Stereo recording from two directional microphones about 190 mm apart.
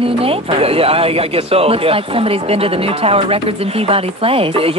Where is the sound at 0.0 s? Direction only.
30° right (ahead or behind).